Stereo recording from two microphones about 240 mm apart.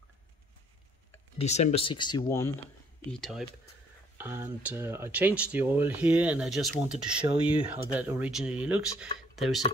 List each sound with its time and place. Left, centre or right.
1.4 s speech: left; by 2.5 s centre
3.1 s speech: centre